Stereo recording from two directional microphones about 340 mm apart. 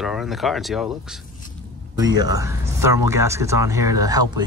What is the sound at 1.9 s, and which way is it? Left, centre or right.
Speech, centre.